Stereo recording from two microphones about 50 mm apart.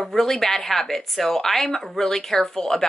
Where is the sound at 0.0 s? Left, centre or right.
Centre.